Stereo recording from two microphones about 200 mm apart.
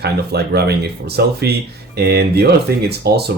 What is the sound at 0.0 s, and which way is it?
Speech, 55° right (ahead or behind).